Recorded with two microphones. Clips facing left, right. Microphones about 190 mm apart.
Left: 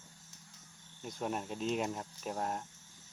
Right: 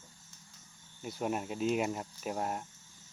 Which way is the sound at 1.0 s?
5° right (ahead or behind).